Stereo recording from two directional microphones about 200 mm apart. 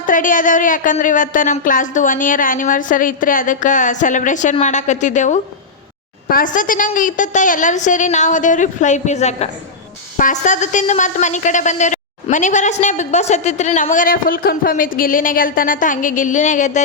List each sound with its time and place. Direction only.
0.0 s a woman's voice: 40° left (ahead or behind)